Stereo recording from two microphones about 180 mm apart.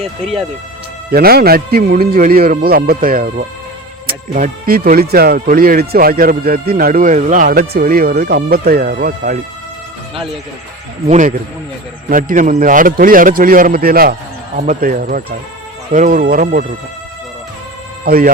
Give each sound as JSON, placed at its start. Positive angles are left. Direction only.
{"t": 1.1, "sound": "speech", "side_deg": -55}
{"t": 11.1, "sound": "speech", "side_deg": -45}
{"t": 18.0, "sound": "speech", "side_deg": -55}